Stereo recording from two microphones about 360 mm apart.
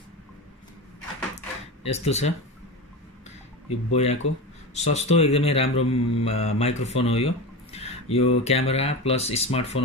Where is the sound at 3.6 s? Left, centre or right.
Centre.